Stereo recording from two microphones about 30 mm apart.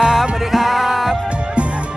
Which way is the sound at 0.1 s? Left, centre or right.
Centre.